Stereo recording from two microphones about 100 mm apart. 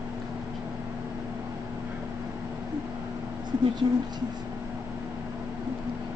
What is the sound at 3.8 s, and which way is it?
Speech, 50° right (ahead or behind).